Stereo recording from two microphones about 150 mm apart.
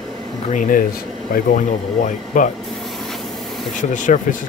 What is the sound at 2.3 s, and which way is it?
Speech, 60° left (ahead or behind).